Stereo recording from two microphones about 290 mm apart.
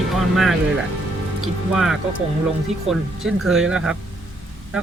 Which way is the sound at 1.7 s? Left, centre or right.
Centre.